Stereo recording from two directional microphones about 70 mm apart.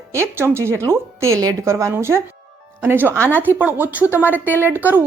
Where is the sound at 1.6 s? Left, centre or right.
Right.